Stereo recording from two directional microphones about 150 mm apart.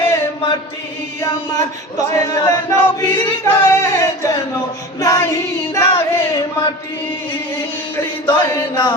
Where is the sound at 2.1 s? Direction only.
25° left (ahead or behind).